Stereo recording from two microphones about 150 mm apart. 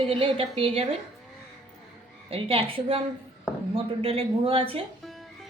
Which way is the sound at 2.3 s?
40° right (ahead or behind).